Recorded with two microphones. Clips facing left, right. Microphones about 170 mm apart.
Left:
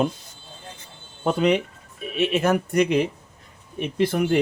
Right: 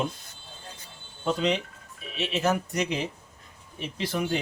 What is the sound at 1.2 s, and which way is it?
Speech, 55° left (ahead or behind).